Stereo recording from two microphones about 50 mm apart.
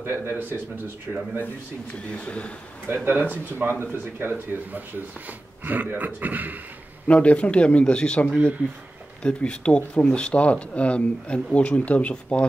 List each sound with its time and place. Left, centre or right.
0.0 s speech: right
1.1 s speech: centre
2.1 s speech: left
2.9 s a man's voice: right
7.1 s speech: left